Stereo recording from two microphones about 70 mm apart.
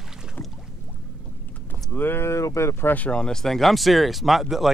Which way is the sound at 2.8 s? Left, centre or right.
Left.